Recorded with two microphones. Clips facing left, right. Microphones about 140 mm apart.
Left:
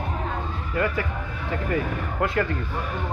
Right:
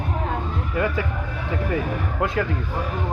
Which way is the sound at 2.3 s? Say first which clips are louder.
Even; 10° right (ahead or behind).